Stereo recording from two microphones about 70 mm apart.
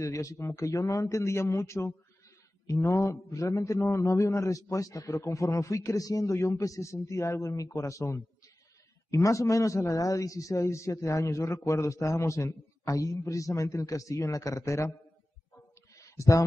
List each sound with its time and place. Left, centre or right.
0.0 s a man's voice: left
6.3 s a man's voice: left
15.5 s a sound: left